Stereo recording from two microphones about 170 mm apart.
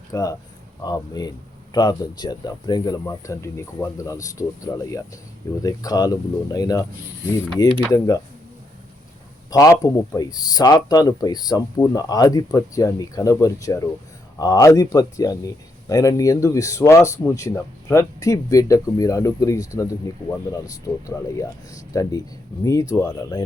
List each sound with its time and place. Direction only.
0.1 s a man's voice: 20° left (ahead or behind)
9.5 s a man's voice: 20° left (ahead or behind)